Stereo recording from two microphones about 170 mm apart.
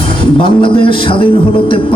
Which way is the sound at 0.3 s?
30° left (ahead or behind).